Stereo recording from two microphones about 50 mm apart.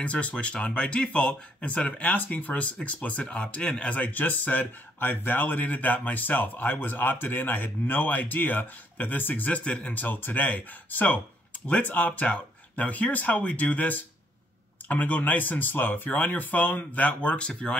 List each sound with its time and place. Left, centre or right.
0.0 s speech: left